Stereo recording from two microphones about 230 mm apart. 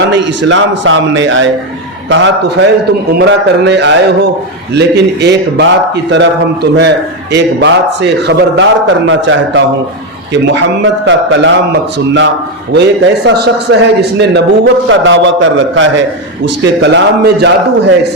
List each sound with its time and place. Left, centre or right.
0.1 s a man's voice: right